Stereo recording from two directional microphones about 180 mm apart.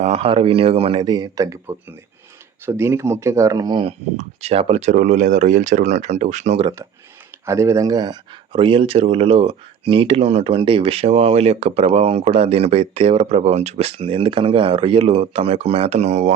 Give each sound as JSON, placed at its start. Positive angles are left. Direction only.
{"t": 0.0, "sound": "speech", "side_deg": -35}
{"t": 4.2, "sound": "speech", "side_deg": -35}
{"t": 7.4, "sound": "speech", "side_deg": -15}